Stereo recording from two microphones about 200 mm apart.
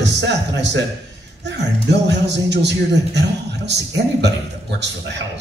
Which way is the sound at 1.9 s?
60° right (ahead or behind).